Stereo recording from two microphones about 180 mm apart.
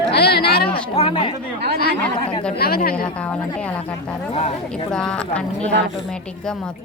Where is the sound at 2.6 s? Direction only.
60° left (ahead or behind).